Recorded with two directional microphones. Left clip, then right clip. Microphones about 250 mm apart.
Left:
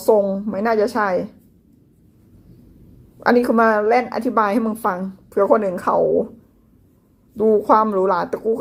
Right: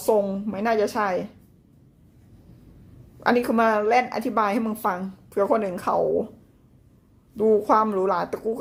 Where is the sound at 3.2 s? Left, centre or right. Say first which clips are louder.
Left 5 dB; centre.